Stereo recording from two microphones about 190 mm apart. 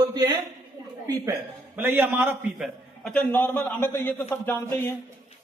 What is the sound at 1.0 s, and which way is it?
A man's voice, 15° right (ahead or behind).